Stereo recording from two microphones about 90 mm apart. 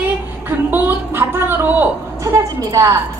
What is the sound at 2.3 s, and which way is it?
Speech, 40° right (ahead or behind).